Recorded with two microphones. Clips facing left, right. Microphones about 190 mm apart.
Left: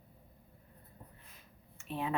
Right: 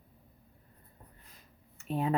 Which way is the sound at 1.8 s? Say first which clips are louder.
Right 6 dB; 40° right (ahead or behind).